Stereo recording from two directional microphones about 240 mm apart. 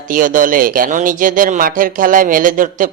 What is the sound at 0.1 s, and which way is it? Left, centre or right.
Speech, right.